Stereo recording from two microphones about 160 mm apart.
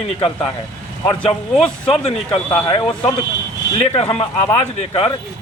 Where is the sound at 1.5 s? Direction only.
5° left (ahead or behind).